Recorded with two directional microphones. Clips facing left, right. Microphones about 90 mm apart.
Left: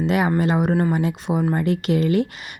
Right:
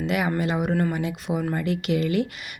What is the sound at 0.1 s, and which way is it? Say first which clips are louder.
Speech: left 4 dB; 35° left (ahead or behind).